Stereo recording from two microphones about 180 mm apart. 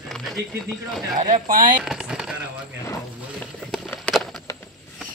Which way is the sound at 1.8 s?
5° right (ahead or behind).